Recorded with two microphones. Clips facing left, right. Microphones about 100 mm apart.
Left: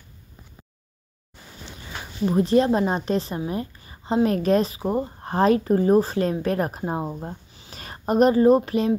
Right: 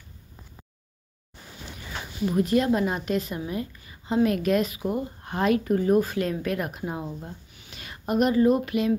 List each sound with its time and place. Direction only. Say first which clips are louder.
2.2 s speech: left 4 dB; 30° left (ahead or behind)